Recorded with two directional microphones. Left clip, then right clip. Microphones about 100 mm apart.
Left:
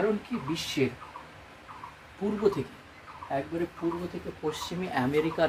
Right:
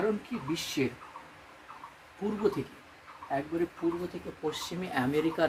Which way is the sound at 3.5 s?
35° left (ahead or behind).